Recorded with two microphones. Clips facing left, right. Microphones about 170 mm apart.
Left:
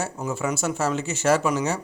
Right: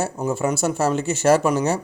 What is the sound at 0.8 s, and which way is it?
Speech, 60° right (ahead or behind).